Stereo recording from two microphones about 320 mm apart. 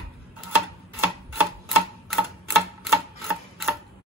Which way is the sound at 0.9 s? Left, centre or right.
Centre.